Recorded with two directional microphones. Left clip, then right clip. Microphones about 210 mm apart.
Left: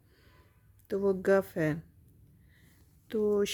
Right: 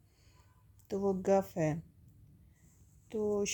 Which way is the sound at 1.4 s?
30° left (ahead or behind).